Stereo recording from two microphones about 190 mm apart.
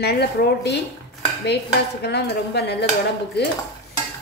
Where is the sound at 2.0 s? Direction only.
60° left (ahead or behind).